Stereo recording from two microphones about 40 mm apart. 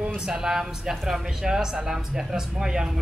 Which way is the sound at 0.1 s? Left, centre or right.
Centre.